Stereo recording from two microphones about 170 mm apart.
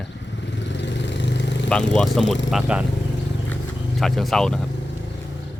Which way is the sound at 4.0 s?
Centre (ahead or behind).